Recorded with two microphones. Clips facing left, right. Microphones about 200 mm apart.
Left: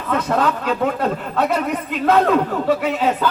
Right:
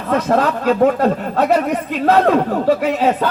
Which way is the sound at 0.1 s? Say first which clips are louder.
Right 3 dB; 40° right (ahead or behind).